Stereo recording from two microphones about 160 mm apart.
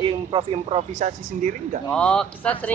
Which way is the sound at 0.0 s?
30° right (ahead or behind).